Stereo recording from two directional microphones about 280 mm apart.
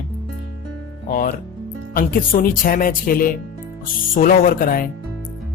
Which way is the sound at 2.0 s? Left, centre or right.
Left.